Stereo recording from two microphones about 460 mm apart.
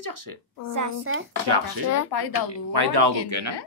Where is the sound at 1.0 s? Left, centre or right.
Right.